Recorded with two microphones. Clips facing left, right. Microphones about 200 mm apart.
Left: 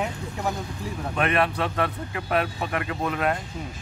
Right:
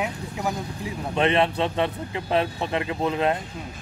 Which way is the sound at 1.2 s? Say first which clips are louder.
Right 3 dB; 25° right (ahead or behind).